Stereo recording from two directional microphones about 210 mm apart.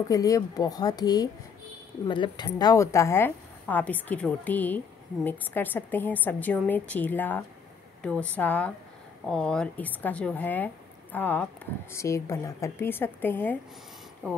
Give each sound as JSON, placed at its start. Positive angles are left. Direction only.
{"t": 0.1, "sound": "speech", "side_deg": 15}